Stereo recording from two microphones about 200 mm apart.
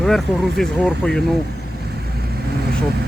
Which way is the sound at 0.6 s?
Centre (ahead or behind).